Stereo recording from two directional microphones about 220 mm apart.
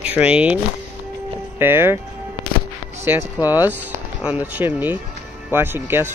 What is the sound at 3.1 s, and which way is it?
Speech, 10° right (ahead or behind).